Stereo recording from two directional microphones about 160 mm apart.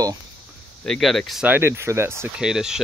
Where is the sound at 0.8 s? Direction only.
Centre (ahead or behind); by 2.3 s 15° right (ahead or behind).